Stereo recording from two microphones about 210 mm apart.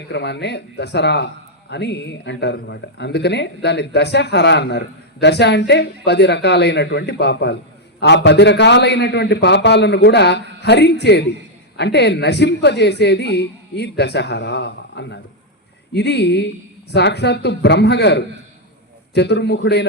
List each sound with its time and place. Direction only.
0.1 s a man's voice: 55° left (ahead or behind)